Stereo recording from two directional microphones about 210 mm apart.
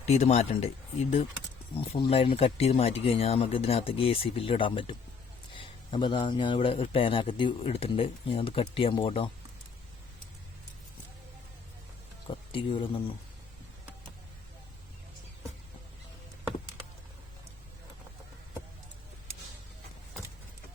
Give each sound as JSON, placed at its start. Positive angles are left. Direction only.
{"t": 0.0, "sound": "a man's voice", "side_deg": 30}
{"t": 12.3, "sound": "speech", "side_deg": 25}